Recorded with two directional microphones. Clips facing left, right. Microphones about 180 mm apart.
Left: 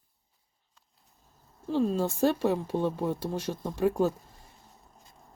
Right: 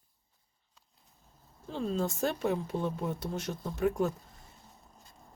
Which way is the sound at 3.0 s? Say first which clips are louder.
Left 4 dB; 30° left (ahead or behind).